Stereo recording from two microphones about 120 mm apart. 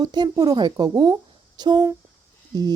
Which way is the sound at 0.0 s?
35° right (ahead or behind).